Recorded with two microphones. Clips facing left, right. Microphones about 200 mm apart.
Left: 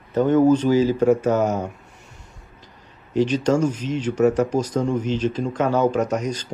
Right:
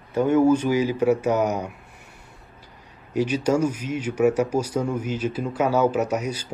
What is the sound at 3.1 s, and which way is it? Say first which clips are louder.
Speech: left 2 dB; 10° right (ahead or behind).